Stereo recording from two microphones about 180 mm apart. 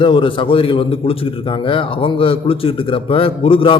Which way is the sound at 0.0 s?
30° left (ahead or behind).